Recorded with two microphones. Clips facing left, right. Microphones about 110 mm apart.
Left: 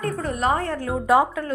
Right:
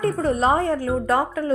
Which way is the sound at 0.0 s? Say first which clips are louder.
Right 4 dB; 30° right (ahead or behind).